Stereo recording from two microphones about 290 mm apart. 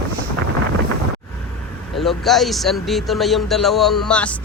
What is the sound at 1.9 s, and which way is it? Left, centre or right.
Speech, centre.